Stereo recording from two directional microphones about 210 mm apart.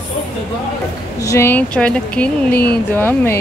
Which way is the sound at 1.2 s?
15° left (ahead or behind).